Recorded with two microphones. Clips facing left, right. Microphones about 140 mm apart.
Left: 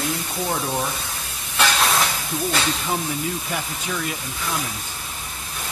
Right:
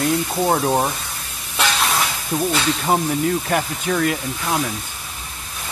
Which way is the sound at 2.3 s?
45° right (ahead or behind).